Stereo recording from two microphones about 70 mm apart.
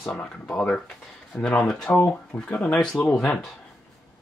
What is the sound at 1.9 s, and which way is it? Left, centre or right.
Speech, left.